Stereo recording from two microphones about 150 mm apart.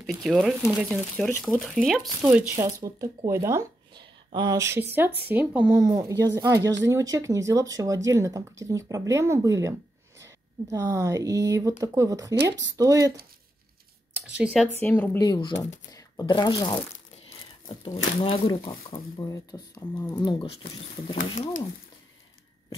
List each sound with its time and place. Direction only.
0.0 s speech: centre (ahead or behind)
2.2 s speech: 15° right (ahead or behind)
3.9 s a woman's voice: 30° right (ahead or behind); by 5.8 s 10° right (ahead or behind)
5.8 s speech: 25° right (ahead or behind)
14.1 s speech: 10° right (ahead or behind)
14.8 s speech: 10° left (ahead or behind)
15.1 s speech: 30° left (ahead or behind)
15.9 s a sound: 20° left (ahead or behind)
16.3 s speech: 30° left (ahead or behind)
17.8 s speech: 35° left (ahead or behind)